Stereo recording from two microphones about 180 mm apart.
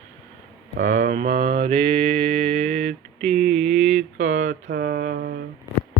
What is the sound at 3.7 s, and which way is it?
Mantra, 40° right (ahead or behind).